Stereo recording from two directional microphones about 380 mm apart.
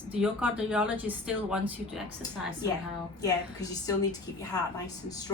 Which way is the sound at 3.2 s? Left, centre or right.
Centre.